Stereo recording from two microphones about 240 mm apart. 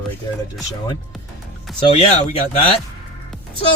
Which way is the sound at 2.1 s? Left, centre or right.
Left.